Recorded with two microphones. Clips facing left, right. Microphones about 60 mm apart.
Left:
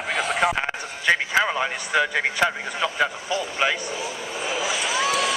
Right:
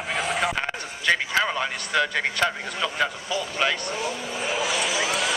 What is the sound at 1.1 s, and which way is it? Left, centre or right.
A man's voice, centre.